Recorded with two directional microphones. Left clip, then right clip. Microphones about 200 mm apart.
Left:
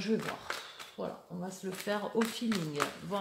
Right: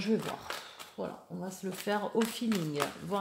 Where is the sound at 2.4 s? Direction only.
10° right (ahead or behind).